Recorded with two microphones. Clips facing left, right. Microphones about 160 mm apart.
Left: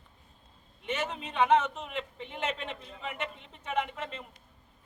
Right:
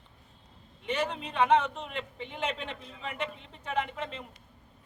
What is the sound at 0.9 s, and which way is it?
Speech, 5° left (ahead or behind).